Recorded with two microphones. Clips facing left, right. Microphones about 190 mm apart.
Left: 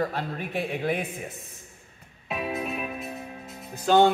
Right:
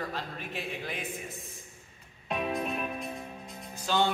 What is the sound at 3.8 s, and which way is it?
Speech, 55° left (ahead or behind).